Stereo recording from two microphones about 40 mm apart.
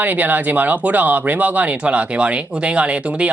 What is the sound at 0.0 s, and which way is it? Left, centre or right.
Speech, right.